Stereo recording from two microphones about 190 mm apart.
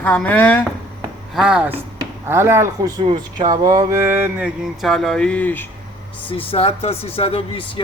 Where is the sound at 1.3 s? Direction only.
5° right (ahead or behind).